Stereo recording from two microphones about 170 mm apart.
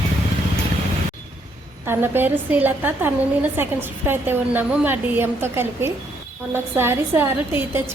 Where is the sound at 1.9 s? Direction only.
10° right (ahead or behind).